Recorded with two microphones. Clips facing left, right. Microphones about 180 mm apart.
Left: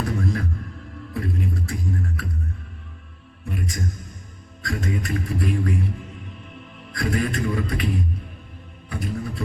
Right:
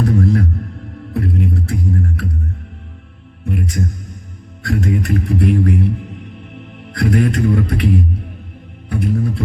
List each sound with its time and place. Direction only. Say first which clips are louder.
0.0 s music: right 9 dB; 50° right (ahead or behind)
1.1 s music: right 7 dB; 65° right (ahead or behind)
3.4 s music: right 8 dB; 60° right (ahead or behind)
4.6 s a man's voice: right 8 dB; 65° right (ahead or behind)
9.1 s music: right 9 dB; 55° right (ahead or behind)